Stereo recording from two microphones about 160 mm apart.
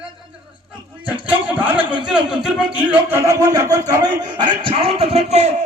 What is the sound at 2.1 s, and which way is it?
Speech, 5° right (ahead or behind).